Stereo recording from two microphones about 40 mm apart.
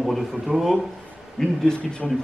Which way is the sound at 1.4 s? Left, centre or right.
Centre.